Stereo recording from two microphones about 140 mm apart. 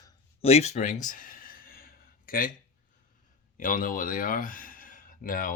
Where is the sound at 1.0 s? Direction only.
80° left.